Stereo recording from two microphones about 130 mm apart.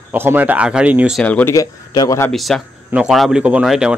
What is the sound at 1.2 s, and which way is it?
Speech, 10° left (ahead or behind).